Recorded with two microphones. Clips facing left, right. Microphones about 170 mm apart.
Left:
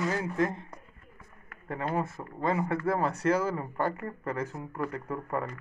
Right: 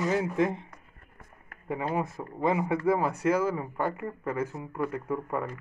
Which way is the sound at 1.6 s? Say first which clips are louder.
Right 1 dB; 10° right (ahead or behind).